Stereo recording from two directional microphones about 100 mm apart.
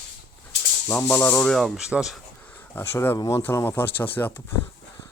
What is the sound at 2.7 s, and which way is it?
Speech, 25° left (ahead or behind).